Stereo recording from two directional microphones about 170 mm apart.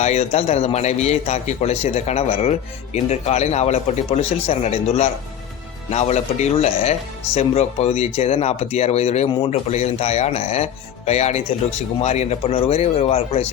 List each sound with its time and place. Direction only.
0.0 s a man's voice: 40° left (ahead or behind)